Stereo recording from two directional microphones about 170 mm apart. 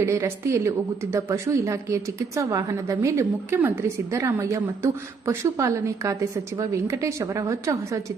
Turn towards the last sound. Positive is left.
turn(degrees=-20)  # may be behind; listen again after turning